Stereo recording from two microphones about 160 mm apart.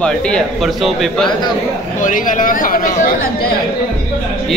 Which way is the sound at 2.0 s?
55° left (ahead or behind).